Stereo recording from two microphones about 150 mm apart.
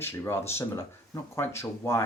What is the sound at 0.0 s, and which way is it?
Speech, 15° left (ahead or behind).